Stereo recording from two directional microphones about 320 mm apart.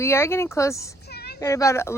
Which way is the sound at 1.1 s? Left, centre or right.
Left.